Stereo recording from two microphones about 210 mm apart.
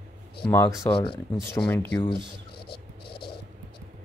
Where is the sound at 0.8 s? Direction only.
25° left (ahead or behind).